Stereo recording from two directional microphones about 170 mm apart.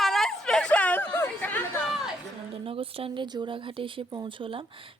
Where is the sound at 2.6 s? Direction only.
30° right (ahead or behind).